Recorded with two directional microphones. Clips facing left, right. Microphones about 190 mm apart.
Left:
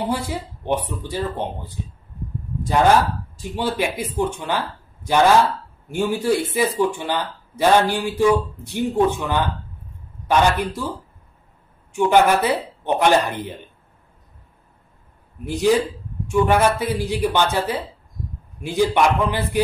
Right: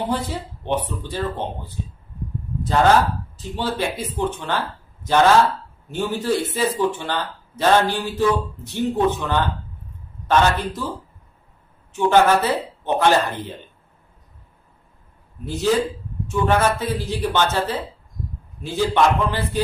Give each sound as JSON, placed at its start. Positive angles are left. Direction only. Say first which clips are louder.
{"t": 0.1, "sound": "speech", "louder": "even", "side_deg": 10}
{"t": 11.9, "sound": "speech", "louder": "even", "side_deg": 15}
{"t": 15.4, "sound": "speech", "louder": "left 2 dB", "side_deg": 15}